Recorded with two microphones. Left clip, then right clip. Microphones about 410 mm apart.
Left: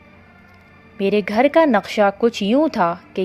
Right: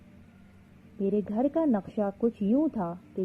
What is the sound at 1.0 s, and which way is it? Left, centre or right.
Speech, left.